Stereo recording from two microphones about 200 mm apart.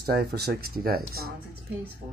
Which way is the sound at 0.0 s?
55° right (ahead or behind).